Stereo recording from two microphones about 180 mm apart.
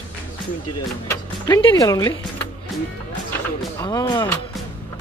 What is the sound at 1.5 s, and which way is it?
Speech, 25° left (ahead or behind).